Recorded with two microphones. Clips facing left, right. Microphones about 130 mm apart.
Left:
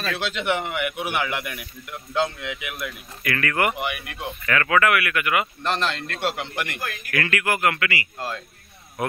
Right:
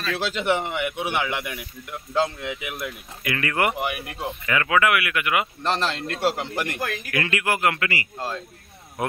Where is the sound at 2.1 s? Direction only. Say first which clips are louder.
Right 1 dB; 30° right (ahead or behind).